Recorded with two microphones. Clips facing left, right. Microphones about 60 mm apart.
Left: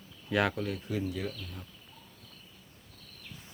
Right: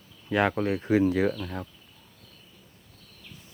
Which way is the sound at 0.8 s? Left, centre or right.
Right.